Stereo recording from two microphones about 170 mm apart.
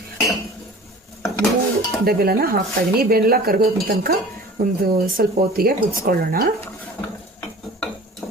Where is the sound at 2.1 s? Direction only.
65° right (ahead or behind).